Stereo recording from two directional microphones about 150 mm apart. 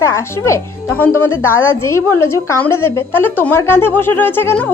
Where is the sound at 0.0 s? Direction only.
20° left (ahead or behind).